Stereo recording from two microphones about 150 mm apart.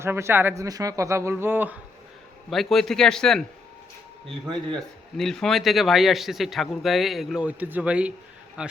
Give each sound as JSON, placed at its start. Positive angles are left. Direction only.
{"t": 0.0, "sound": "speech", "side_deg": -15}
{"t": 2.5, "sound": "speech", "side_deg": 0}
{"t": 4.7, "sound": "speech", "side_deg": 5}